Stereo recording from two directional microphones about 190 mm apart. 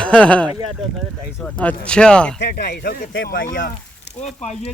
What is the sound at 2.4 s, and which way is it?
Speech, 60° left (ahead or behind).